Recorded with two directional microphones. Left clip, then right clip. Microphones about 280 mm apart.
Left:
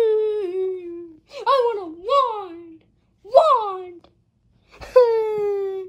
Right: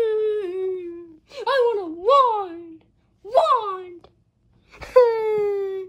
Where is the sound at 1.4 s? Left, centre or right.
Centre.